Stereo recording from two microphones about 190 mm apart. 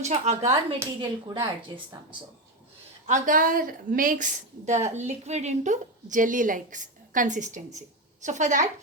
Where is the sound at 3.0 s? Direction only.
40° right (ahead or behind).